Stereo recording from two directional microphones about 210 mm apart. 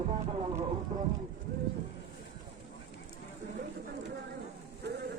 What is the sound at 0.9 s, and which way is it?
Speech, 35° right (ahead or behind).